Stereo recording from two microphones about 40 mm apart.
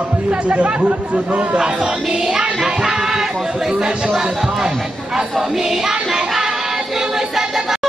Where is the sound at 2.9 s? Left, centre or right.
Centre.